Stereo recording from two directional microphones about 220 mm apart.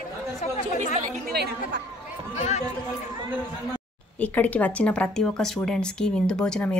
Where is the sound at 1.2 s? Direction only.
45° right (ahead or behind).